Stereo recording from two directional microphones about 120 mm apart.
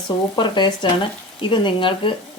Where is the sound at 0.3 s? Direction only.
40° left (ahead or behind).